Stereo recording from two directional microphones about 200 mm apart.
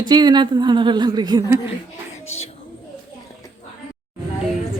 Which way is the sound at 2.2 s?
90° left.